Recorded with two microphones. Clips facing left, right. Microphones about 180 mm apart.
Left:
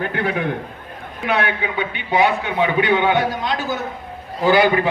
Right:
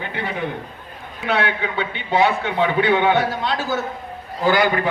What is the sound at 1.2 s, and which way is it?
A man's voice, 15° left (ahead or behind).